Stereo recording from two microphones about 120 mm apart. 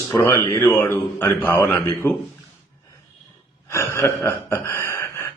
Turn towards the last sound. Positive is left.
turn(degrees=20)  # may be behind; listen again after turning